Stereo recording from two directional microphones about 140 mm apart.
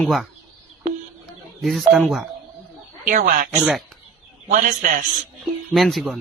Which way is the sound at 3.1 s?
70° right (ahead or behind).